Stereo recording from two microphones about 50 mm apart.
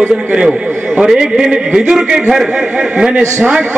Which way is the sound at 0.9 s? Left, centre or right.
Centre.